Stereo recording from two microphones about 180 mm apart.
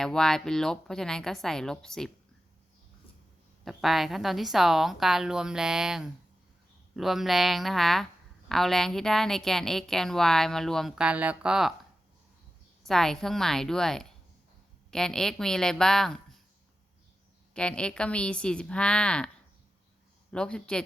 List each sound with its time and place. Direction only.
0.0 s a woman's voice: 5° left (ahead or behind)
3.6 s a woman's voice: centre (ahead or behind)
12.8 s a woman's voice: centre (ahead or behind)
17.5 s a woman's voice: 5° left (ahead or behind)
20.3 s a woman's voice: 5° left (ahead or behind)